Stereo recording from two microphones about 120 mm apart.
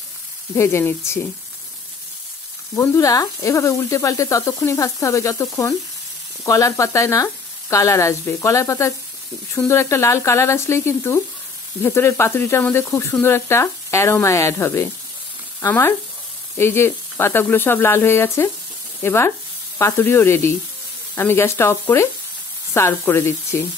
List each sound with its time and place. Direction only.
0.6 s speech: 20° left (ahead or behind)
2.7 s speech: 20° left (ahead or behind)